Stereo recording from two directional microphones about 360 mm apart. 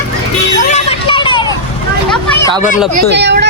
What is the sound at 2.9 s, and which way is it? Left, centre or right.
Speech, right.